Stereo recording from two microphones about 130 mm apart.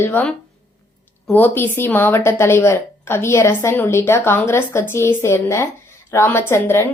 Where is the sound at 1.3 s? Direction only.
15° left (ahead or behind).